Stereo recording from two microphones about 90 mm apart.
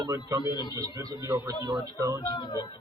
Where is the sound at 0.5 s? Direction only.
50° left (ahead or behind).